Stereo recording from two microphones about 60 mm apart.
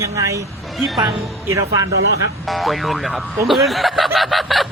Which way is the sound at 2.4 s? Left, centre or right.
Centre.